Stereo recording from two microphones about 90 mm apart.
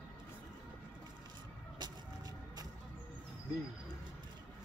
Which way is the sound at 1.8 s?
50° right (ahead or behind).